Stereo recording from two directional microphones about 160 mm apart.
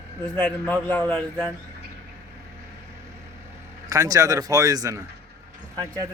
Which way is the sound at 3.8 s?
20° right (ahead or behind).